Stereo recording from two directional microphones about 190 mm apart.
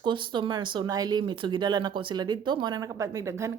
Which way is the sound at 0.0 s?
25° right (ahead or behind).